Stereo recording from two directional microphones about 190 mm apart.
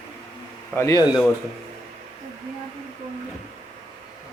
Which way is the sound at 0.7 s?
15° left (ahead or behind).